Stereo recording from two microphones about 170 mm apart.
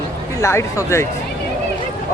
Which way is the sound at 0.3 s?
15° left (ahead or behind).